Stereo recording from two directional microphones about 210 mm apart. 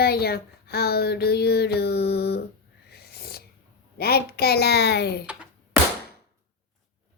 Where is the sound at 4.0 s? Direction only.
50° left (ahead or behind).